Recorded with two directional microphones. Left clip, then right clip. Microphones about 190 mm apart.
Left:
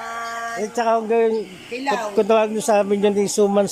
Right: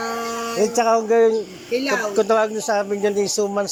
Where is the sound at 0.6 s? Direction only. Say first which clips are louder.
Right 2 dB; centre (ahead or behind).